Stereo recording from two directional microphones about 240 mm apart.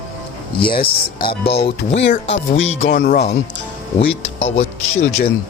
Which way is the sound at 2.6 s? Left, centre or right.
Left.